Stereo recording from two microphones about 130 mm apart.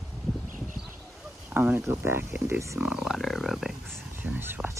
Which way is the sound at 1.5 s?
15° right (ahead or behind).